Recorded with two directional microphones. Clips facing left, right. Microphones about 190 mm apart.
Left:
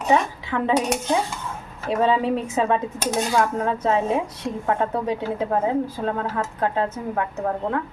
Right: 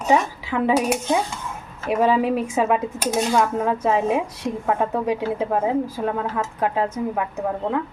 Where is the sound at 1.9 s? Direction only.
10° right (ahead or behind).